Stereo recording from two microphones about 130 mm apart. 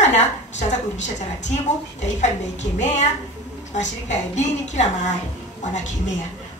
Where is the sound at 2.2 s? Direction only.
65° left (ahead or behind).